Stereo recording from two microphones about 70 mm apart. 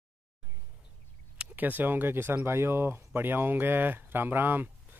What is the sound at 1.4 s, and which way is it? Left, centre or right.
Speech, right.